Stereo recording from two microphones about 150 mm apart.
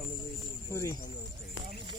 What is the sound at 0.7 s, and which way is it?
Speech, 20° left (ahead or behind).